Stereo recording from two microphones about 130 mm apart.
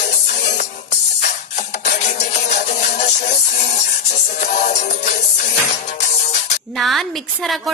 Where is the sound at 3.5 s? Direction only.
65° left (ahead or behind).